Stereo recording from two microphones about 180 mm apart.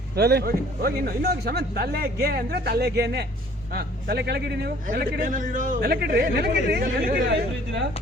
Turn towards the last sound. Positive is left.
turn(degrees=-70)  # may be behind; listen again after turning